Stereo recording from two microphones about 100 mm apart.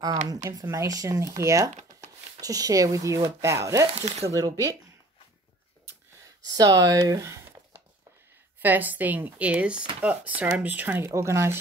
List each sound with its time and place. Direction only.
0.0 s speech: 40° right (ahead or behind)
6.4 s speech: 40° right (ahead or behind)
8.5 s speech: 20° right (ahead or behind)
11.1 s speech: 30° right (ahead or behind)